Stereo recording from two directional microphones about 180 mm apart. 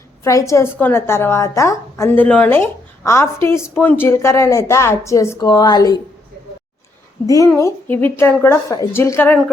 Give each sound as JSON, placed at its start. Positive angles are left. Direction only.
{"t": 0.3, "sound": "a woman's voice", "side_deg": 15}
{"t": 7.3, "sound": "a woman's voice", "side_deg": 15}